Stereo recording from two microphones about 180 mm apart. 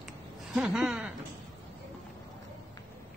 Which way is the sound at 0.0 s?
Centre (ahead or behind).